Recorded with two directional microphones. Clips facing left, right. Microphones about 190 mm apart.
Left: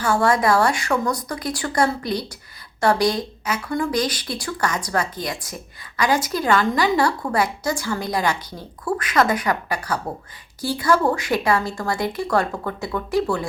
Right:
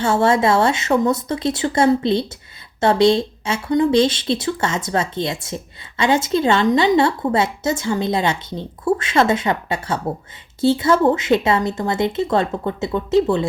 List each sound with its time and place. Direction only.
0.0 s a woman's voice: 25° right (ahead or behind)